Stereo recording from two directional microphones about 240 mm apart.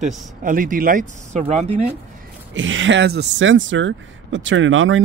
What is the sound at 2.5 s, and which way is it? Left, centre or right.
Speech, right.